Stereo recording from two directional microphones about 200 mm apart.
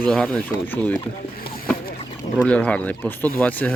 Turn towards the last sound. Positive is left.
turn(degrees=10)  # may be behind; listen again after turning